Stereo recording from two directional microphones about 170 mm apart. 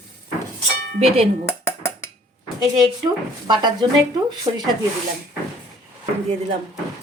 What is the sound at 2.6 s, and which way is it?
Speech, 25° right (ahead or behind).